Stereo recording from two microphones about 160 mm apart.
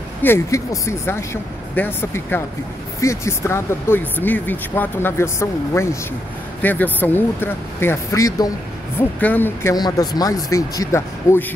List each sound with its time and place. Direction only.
0.2 s speech: 15° left (ahead or behind)